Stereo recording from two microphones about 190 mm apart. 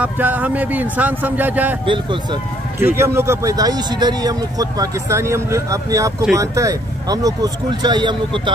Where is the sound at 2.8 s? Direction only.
15° right (ahead or behind).